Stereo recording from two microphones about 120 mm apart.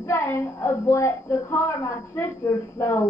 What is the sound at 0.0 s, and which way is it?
A man's voice, 25° left (ahead or behind).